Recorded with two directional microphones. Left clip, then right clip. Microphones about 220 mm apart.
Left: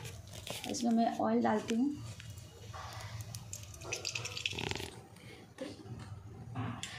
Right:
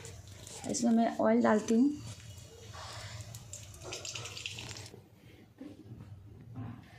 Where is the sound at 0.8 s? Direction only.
25° right (ahead or behind).